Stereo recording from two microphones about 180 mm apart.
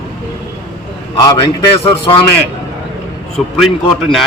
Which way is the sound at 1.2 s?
25° left (ahead or behind).